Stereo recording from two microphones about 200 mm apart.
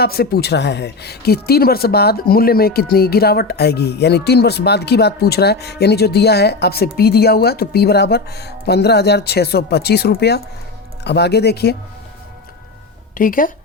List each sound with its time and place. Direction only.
0.0 s speech: 50° left (ahead or behind)
13.1 s speech: 45° left (ahead or behind)